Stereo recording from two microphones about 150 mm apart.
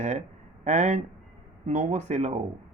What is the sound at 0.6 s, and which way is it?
Speech, 50° right (ahead or behind).